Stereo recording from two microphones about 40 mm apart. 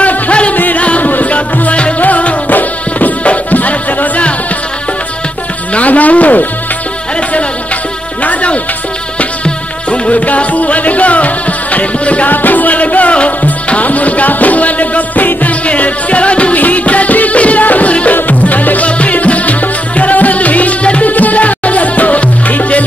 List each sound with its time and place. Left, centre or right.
0.0 s music: left
0.6 s music: left
5.8 s music: left
8.2 s music: left